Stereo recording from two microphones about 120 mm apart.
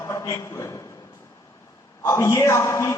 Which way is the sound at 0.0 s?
25° left (ahead or behind).